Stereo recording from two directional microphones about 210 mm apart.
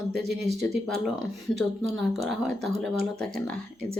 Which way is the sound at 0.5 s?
Centre (ahead or behind).